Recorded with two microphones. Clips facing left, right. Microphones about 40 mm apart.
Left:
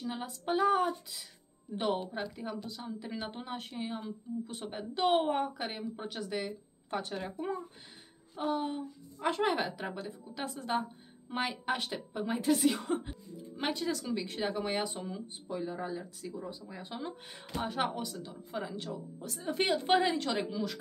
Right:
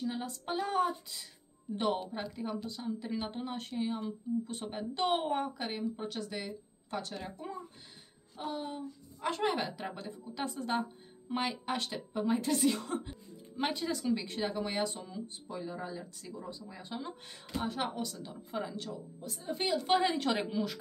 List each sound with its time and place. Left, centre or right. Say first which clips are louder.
0.0 s a woman's voice: even; centre
6.4 s speech: left 3 dB; left
8.4 s speech: left 5 dB; centre
13.6 s a woman's voice: even; centre
14.5 s speech: left 1 dB; centre
18.2 s a woman's voice: right 1 dB; centre
19.2 s a woman's voice: left 4 dB; left
20.3 s a woman's voice: right 1 dB; right